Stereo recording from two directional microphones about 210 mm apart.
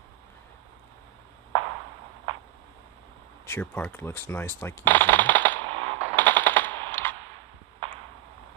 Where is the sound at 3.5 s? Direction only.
10° left (ahead or behind).